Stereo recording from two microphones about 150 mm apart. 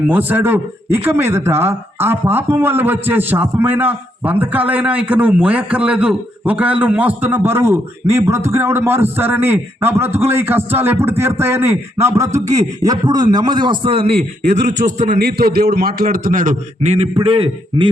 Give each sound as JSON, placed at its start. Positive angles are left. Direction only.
{"t": 0.1, "sound": "a man's voice", "side_deg": -10}